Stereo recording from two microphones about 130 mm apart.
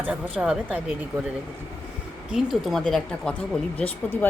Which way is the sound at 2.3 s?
Centre (ahead or behind).